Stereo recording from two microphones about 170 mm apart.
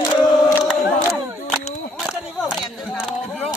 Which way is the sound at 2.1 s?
Centre (ahead or behind).